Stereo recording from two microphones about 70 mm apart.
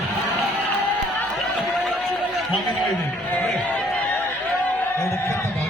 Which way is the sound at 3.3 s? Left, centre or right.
Left.